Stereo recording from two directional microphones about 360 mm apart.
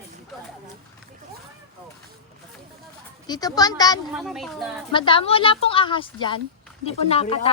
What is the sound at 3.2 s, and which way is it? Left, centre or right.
Speech, centre.